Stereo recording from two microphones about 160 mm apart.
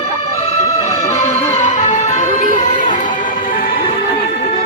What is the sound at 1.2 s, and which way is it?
Music, 40° left (ahead or behind).